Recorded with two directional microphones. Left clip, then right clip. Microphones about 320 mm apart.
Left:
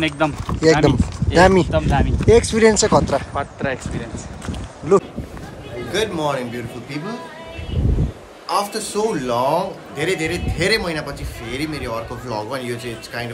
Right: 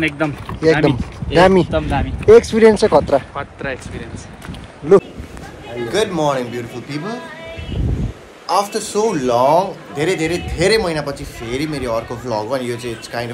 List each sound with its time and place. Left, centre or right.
0.0 s speech: centre
1.7 s speech: centre
3.3 s speech: left
5.9 s a man's voice: centre
8.5 s a man's voice: centre